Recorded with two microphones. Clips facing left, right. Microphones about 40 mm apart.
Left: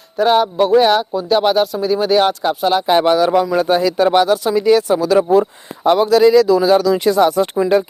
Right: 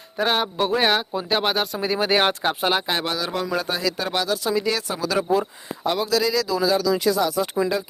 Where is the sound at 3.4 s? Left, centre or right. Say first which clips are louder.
Left 9 dB; centre.